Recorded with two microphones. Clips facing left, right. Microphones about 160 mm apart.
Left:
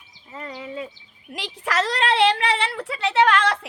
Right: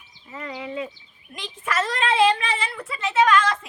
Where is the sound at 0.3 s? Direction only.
30° left (ahead or behind).